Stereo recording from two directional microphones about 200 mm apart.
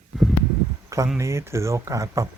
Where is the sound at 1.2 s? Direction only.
15° right (ahead or behind).